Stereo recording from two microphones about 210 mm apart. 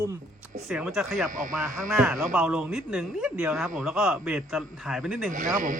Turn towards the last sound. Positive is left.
turn(degrees=-40)  # may be behind; listen again after turning